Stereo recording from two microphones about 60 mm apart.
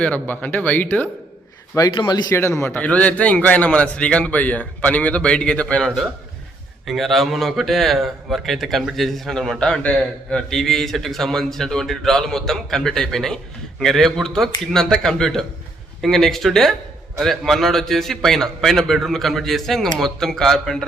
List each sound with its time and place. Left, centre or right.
0.0 s speech: left
1.7 s a man's voice: left
2.3 s speech: left
2.8 s a man's voice: left
6.8 s a man's voice: centre